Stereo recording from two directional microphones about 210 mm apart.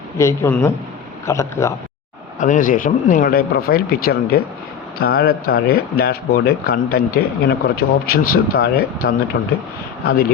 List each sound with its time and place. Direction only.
0.2 s a man's voice: 15° left (ahead or behind)
2.4 s speech: 40° left (ahead or behind); by 9.5 s 55° left (ahead or behind)